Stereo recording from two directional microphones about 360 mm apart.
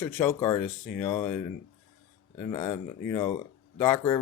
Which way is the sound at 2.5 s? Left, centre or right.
Centre.